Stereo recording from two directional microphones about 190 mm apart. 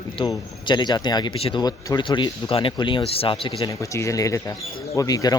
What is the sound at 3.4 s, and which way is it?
Speech, 20° left (ahead or behind).